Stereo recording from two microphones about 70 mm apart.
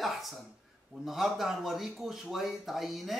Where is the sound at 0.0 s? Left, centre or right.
Centre.